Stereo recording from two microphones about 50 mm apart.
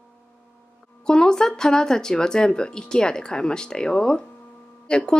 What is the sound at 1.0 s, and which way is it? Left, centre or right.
Speech, centre.